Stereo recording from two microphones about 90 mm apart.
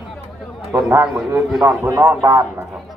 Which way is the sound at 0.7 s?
20° right (ahead or behind).